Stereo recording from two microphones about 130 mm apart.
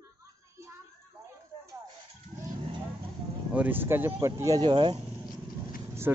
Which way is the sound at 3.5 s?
15° right (ahead or behind).